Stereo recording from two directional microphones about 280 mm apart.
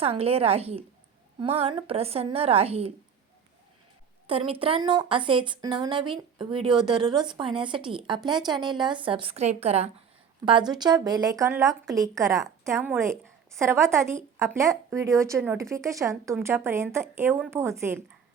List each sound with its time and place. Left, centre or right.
0.0 s a woman's voice: right
4.3 s a woman's voice: centre